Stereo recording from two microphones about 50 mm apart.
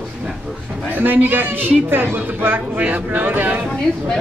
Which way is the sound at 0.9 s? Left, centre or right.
Right.